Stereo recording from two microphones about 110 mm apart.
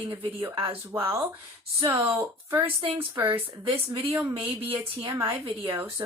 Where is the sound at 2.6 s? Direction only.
55° right (ahead or behind).